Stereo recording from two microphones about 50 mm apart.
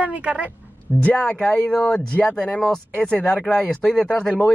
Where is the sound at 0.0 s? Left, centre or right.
Right.